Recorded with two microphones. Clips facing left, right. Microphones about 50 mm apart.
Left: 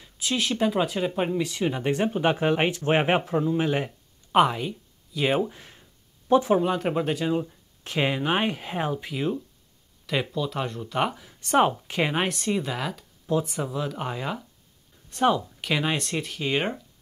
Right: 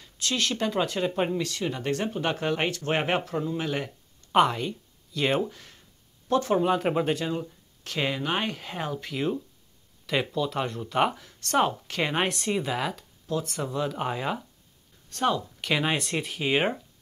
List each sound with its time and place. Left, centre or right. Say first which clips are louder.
0.0 s speech: left 1 dB; centre
4.3 s speech: left 1 dB; centre
5.5 s a sound: left 1 dB; centre
6.6 s speech: right 1 dB; centre
11.2 s speech: left 3 dB; centre
12.1 s speech: left 1 dB; centre
13.3 s speech: left 3 dB; centre
15.0 s speech: left 4 dB; centre
15.6 s speech: right 2 dB; centre